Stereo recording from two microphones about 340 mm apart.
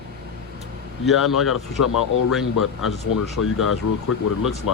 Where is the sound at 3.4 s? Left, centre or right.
Left.